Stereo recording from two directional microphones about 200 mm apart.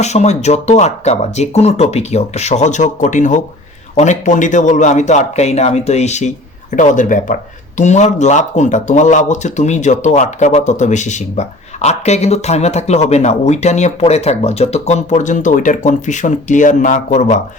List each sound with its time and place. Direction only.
0.0 s speech: 35° left (ahead or behind)